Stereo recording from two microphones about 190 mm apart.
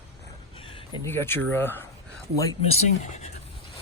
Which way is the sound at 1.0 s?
10° left (ahead or behind).